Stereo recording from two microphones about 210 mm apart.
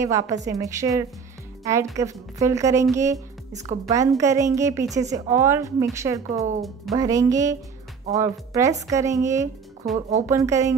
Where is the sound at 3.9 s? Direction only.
15° right (ahead or behind).